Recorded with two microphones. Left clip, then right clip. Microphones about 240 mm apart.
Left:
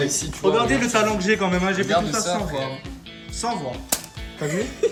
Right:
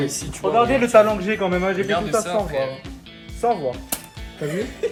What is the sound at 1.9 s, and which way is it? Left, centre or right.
Speech, left.